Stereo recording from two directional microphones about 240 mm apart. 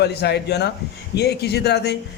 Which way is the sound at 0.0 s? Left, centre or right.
Left.